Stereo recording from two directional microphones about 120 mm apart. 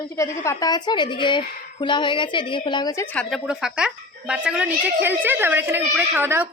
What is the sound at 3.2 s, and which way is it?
A woman's voice, 5° right (ahead or behind).